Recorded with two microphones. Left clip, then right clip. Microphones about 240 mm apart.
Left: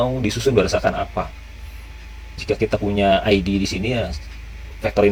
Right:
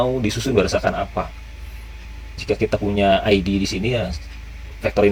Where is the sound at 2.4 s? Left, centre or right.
Right.